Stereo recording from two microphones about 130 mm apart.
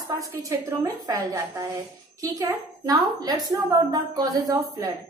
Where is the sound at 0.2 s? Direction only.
25° right (ahead or behind).